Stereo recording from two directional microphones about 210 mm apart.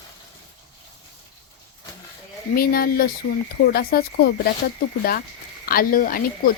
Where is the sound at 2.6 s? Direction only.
45° left (ahead or behind).